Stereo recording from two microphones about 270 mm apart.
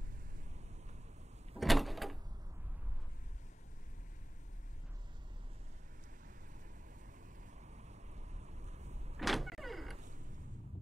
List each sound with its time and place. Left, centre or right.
1.6 s door: centre
7.7 s vehicle: right
9.2 s power windows: centre